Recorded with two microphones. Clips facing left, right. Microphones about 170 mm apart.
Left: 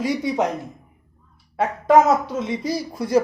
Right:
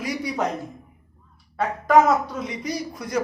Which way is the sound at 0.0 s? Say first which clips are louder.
Left 5 dB; 25° left (ahead or behind).